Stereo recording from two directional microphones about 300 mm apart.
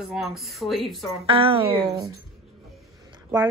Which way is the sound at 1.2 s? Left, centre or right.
Centre.